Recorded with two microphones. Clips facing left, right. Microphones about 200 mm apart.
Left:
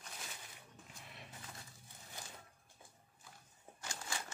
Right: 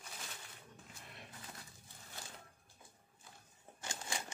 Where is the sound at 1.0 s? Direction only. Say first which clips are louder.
Even; centre (ahead or behind).